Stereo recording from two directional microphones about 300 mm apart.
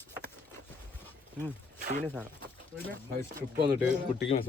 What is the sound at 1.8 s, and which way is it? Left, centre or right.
Speech, right.